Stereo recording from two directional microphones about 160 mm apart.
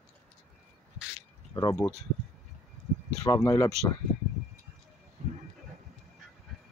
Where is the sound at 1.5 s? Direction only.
20° left (ahead or behind).